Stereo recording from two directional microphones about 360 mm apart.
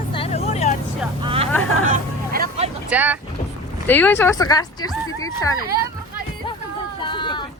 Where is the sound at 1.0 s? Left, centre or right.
Centre.